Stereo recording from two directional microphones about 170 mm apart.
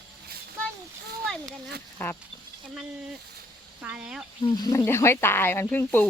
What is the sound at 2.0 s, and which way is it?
Speech, 15° left (ahead or behind).